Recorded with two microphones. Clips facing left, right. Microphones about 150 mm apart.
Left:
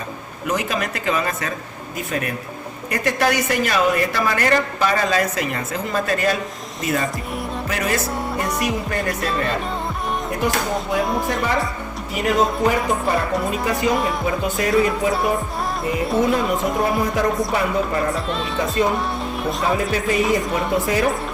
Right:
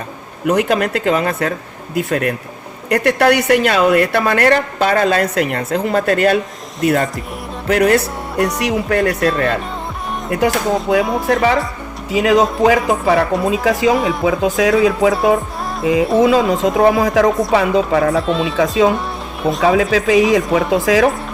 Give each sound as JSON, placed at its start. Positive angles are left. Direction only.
{"t": 0.4, "sound": "a woman's voice", "side_deg": -65}
{"t": 8.5, "sound": "speech", "side_deg": -80}
{"t": 10.2, "sound": "music", "side_deg": -85}
{"t": 10.8, "sound": "speech", "side_deg": -90}
{"t": 18.1, "sound": "a woman's voice", "side_deg": 0}
{"t": 18.5, "sound": "speech", "side_deg": -90}
{"t": 19.4, "sound": "speech", "side_deg": 0}
{"t": 19.6, "sound": "speech", "side_deg": -90}